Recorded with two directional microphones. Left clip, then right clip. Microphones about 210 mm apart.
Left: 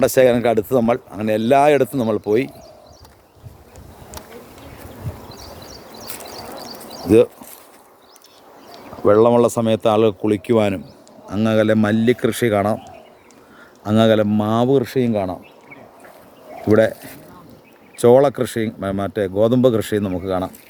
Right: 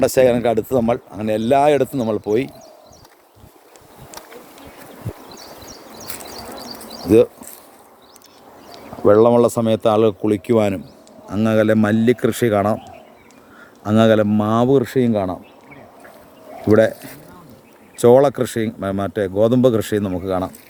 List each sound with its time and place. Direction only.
0.0 s speech: 5° left (ahead or behind)
6.0 s horse: 55° right (ahead or behind)
9.0 s speech: 5° right (ahead or behind)
13.8 s speech: 10° right (ahead or behind)
16.6 s speech: 10° right (ahead or behind)